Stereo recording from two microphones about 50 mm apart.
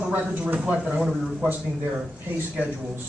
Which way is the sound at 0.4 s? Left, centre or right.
Right.